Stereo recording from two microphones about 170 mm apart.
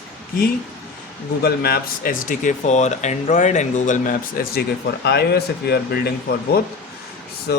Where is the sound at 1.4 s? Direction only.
70° left (ahead or behind).